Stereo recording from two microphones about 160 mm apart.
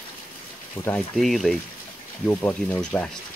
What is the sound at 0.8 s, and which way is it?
Speech, 30° left (ahead or behind).